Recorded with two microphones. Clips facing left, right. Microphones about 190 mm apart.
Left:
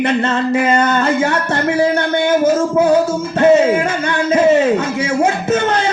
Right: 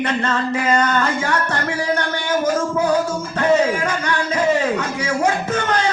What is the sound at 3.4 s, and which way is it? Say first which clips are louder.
Music: left 6 dB; 25° left (ahead or behind).